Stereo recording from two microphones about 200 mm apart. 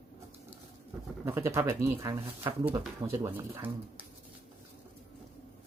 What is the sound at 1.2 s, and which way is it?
Speech, 10° right (ahead or behind).